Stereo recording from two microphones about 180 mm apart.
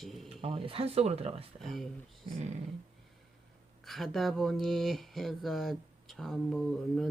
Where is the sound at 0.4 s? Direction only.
30° right (ahead or behind).